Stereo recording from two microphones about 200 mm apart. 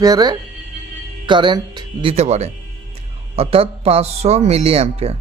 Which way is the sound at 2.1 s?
35° right (ahead or behind).